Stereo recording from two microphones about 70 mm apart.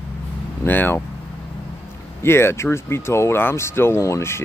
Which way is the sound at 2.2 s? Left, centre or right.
Left.